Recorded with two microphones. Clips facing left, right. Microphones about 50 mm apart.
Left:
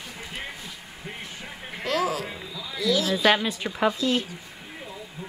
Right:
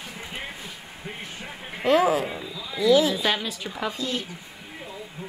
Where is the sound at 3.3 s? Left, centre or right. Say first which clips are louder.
Left 4 dB; left.